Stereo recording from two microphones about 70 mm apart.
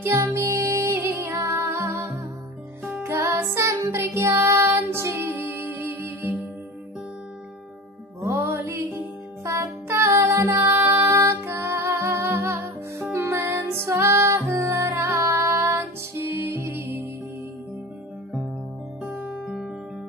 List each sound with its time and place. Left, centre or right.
0.0 s music: right
8.2 s music: right
19.3 s music: centre